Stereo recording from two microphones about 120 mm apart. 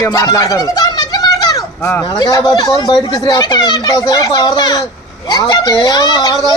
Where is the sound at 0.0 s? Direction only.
30° left (ahead or behind).